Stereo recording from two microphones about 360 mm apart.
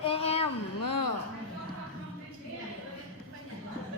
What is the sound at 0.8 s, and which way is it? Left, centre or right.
Speech, left.